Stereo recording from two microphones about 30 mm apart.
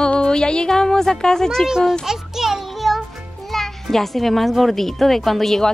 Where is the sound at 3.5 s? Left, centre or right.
Centre.